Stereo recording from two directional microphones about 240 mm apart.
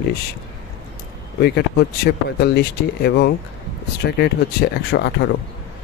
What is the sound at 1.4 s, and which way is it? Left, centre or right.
Speech, left.